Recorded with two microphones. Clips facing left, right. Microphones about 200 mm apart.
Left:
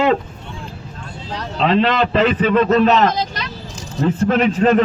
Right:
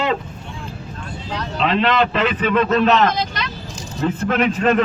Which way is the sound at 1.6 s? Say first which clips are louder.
Left 2 dB; 35° left (ahead or behind).